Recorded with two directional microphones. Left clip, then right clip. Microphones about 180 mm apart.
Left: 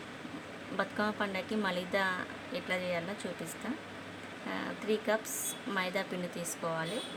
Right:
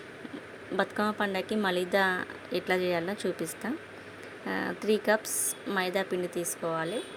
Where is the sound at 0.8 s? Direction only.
30° right (ahead or behind).